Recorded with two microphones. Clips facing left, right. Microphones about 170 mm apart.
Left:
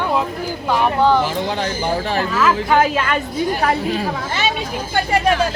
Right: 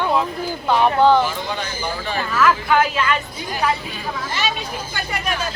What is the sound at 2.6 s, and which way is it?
A woman's voice, 40° left (ahead or behind).